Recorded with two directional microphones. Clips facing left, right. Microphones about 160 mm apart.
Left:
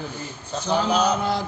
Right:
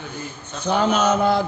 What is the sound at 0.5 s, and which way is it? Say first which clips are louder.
Speech: right 2 dB; 35° left (ahead or behind).